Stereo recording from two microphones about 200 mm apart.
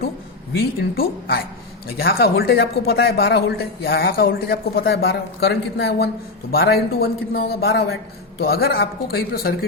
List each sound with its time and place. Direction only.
0.8 s speech: 50° left (ahead or behind)